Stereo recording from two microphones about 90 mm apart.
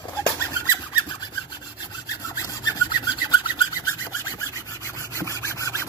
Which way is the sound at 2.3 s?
40° left (ahead or behind).